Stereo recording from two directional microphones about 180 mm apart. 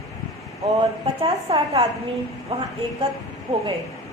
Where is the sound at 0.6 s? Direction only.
30° right (ahead or behind).